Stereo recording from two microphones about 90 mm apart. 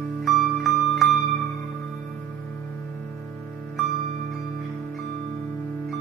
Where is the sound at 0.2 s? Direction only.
Centre (ahead or behind).